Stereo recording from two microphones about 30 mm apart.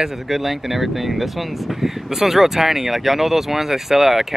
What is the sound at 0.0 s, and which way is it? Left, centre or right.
A man's voice, centre.